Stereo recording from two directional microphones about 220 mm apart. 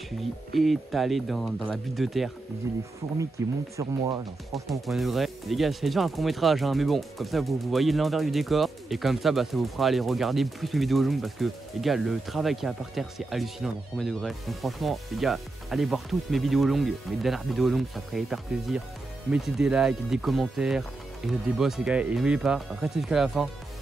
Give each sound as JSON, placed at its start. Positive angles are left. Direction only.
{"t": 0.6, "sound": "speech", "side_deg": 0}
{"t": 3.4, "sound": "speech", "side_deg": -15}
{"t": 4.6, "sound": "speech", "side_deg": 0}